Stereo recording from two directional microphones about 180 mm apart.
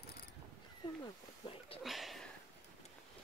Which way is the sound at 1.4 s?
25° left (ahead or behind).